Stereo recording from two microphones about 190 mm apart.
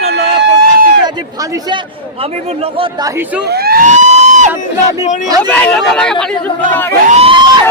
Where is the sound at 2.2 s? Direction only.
30° right (ahead or behind).